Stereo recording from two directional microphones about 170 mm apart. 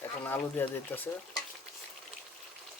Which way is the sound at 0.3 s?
10° left (ahead or behind).